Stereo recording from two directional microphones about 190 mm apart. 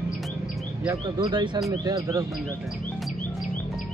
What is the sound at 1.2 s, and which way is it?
Speech, 25° right (ahead or behind).